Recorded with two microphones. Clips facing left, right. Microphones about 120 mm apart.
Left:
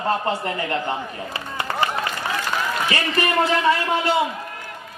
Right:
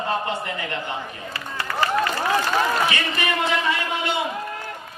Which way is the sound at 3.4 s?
35° left (ahead or behind).